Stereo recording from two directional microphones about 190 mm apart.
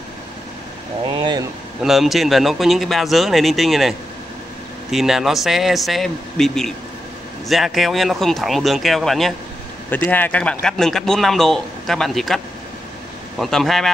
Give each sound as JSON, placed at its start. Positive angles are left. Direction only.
{"t": 1.0, "sound": "speech", "side_deg": -25}
{"t": 1.8, "sound": "a man's voice", "side_deg": 0}
{"t": 4.9, "sound": "a man's voice", "side_deg": 0}
{"t": 13.4, "sound": "a man's voice", "side_deg": 0}